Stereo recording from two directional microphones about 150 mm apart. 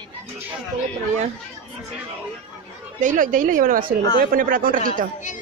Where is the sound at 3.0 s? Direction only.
60° right (ahead or behind).